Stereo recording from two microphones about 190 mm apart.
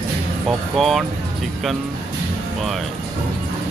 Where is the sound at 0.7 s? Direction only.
Centre (ahead or behind).